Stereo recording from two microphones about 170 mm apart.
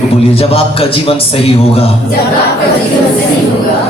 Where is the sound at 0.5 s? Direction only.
35° left (ahead or behind).